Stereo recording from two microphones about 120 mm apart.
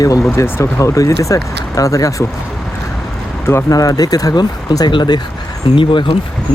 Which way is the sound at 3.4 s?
25° left (ahead or behind).